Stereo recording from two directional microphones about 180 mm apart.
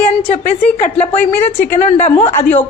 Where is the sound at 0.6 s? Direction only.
40° left (ahead or behind).